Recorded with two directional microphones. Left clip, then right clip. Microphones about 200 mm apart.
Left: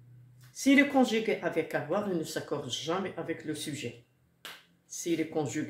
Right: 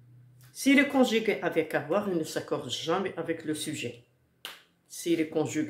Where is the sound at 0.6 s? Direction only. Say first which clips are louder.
Right 1 dB; 20° right (ahead or behind).